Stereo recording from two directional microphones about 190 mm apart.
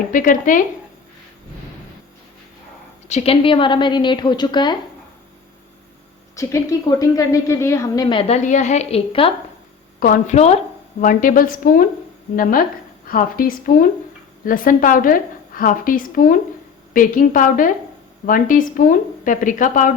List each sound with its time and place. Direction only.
0.1 s a woman's voice: 45° left (ahead or behind)
3.1 s a woman's voice: 35° left (ahead or behind)
6.3 s a woman's voice: 15° left (ahead or behind)
8.4 s a woman's voice: 40° left (ahead or behind)
10.0 s a woman's voice: 40° left (ahead or behind)